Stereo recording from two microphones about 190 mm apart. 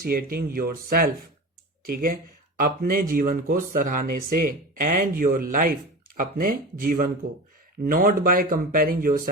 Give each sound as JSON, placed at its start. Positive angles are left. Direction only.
{"t": 0.0, "sound": "speech", "side_deg": -50}